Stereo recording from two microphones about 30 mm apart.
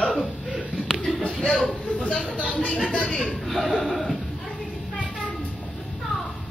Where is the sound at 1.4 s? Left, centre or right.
Left.